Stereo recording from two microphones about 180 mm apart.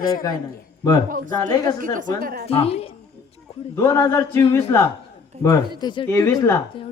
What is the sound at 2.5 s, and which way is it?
Speech, 35° left (ahead or behind).